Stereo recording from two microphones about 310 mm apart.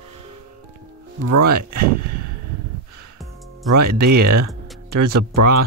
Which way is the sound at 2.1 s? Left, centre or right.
Right.